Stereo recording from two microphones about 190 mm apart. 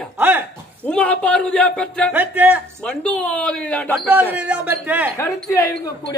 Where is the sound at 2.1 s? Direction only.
10° right (ahead or behind).